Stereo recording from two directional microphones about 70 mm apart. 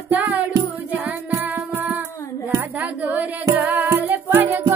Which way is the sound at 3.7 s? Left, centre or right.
Right.